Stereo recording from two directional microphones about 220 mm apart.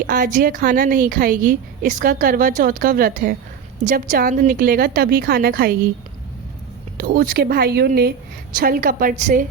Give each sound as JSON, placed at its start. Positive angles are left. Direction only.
{"t": 0.1, "sound": "a woman's voice", "side_deg": -40}
{"t": 6.9, "sound": "a woman's voice", "side_deg": -40}